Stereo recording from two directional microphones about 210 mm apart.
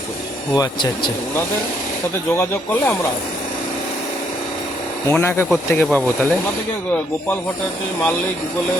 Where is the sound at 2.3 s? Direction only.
10° left (ahead or behind).